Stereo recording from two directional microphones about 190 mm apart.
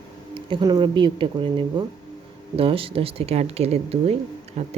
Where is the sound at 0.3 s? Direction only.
25° right (ahead or behind).